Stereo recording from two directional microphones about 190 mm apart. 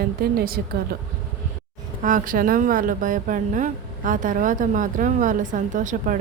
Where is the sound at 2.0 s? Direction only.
45° right (ahead or behind).